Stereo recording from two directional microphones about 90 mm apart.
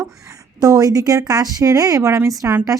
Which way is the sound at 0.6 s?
40° right (ahead or behind).